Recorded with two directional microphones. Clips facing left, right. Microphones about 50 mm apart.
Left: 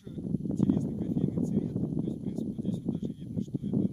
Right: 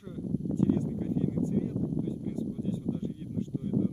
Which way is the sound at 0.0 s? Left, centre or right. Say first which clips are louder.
Even; centre.